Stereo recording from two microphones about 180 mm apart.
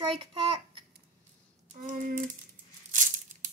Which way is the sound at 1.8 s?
45° right (ahead or behind).